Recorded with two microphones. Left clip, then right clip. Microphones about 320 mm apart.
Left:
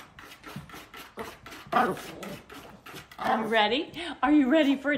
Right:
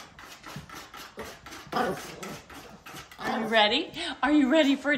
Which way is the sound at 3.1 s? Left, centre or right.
Left.